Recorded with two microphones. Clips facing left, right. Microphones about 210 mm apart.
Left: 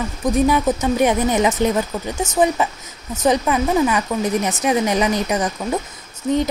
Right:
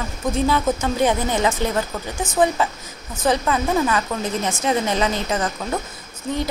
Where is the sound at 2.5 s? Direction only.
15° left (ahead or behind).